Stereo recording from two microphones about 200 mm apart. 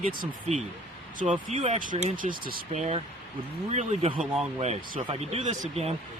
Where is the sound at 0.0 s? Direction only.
45° right (ahead or behind).